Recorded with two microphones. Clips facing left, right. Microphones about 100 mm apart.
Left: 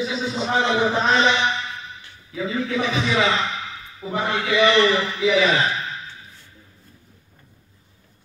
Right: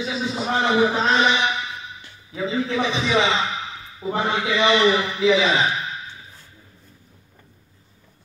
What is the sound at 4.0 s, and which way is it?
A man's voice, 15° right (ahead or behind).